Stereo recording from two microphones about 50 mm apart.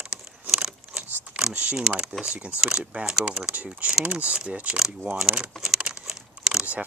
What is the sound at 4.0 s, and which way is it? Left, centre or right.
Speech, right.